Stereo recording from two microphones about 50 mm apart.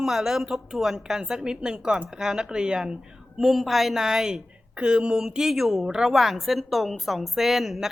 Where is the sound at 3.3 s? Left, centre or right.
Centre.